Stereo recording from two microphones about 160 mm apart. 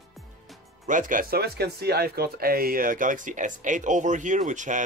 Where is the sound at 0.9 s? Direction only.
55° right (ahead or behind).